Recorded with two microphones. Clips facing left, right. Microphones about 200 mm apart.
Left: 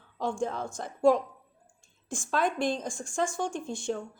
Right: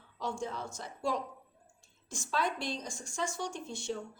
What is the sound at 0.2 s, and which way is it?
A woman's voice, 50° left (ahead or behind).